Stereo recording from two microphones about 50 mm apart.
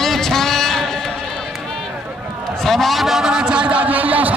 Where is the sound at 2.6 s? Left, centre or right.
Centre; by 4.3 s right.